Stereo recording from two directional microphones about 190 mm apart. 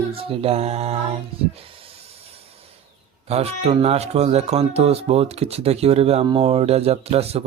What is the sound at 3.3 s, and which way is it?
Speech, 35° right (ahead or behind).